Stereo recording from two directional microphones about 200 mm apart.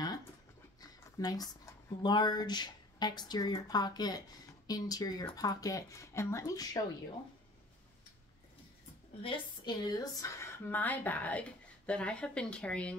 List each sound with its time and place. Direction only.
0.7 s dog: 20° left (ahead or behind)
2.0 s speech: 20° left (ahead or behind)
9.2 s a woman's voice: 25° left (ahead or behind); by 12.9 s 5° left (ahead or behind)